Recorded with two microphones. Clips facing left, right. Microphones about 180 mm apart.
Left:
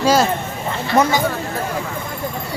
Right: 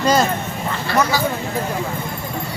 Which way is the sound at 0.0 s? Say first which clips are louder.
Left 1 dB; 5° left (ahead or behind).